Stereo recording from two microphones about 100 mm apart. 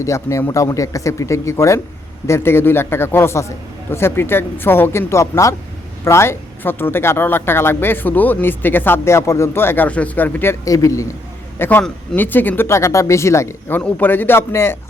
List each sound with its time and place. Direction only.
0.0 s speech: 30° left (ahead or behind)
10.7 s speech: 35° left (ahead or behind)
11.6 s speech: 20° left (ahead or behind)
13.7 s speech: 20° left (ahead or behind)